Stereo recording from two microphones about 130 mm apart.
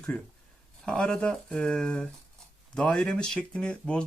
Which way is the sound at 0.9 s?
5° left (ahead or behind).